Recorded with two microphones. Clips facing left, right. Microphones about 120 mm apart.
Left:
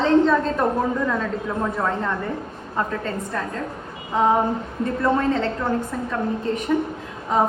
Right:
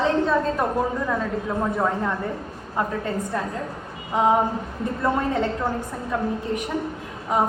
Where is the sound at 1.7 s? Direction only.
15° right (ahead or behind).